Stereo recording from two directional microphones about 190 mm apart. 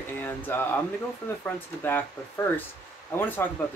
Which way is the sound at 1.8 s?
10° left (ahead or behind).